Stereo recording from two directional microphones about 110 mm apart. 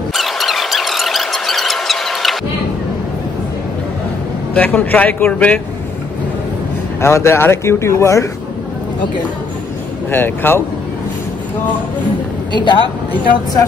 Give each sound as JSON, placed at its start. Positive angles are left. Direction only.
{"t": 0.1, "sound": "squeal", "side_deg": 0}
{"t": 4.6, "sound": "a man's voice", "side_deg": 15}
{"t": 7.0, "sound": "speech", "side_deg": 25}
{"t": 10.1, "sound": "speech", "side_deg": 20}
{"t": 12.5, "sound": "speech", "side_deg": 45}